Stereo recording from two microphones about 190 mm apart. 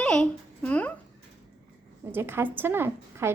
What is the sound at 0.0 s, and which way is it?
Speech, 5° left (ahead or behind).